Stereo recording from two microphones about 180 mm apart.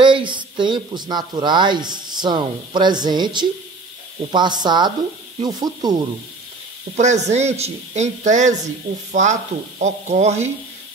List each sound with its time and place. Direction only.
0.0 s speech: 25° right (ahead or behind)
7.0 s a man's voice: 40° right (ahead or behind)